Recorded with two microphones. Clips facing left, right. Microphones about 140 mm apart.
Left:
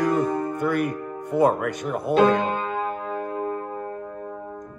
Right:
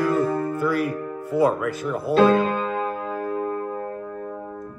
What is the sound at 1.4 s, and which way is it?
Speech, 50° left (ahead or behind).